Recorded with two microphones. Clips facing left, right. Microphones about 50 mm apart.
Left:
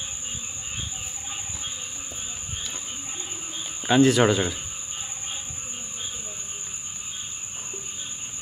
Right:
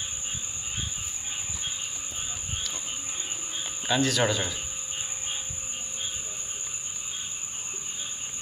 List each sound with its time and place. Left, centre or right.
3.8 s speech: left